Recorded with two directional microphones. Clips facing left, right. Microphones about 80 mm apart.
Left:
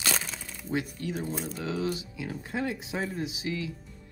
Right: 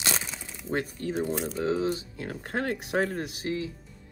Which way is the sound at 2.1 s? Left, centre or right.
Right.